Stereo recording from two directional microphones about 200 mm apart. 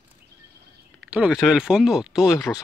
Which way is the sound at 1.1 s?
5° right (ahead or behind).